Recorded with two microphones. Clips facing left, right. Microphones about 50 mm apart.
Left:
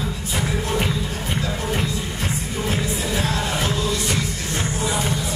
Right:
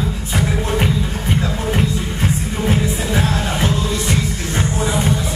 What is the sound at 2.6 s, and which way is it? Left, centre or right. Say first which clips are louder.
Music: right 5 dB; right.